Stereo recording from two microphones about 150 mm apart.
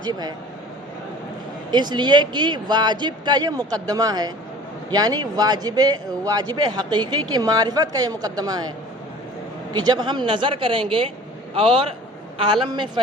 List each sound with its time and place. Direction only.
0.0 s a man's voice: 25° right (ahead or behind)
1.7 s a man's voice: 30° right (ahead or behind)
9.7 s a man's voice: 30° right (ahead or behind)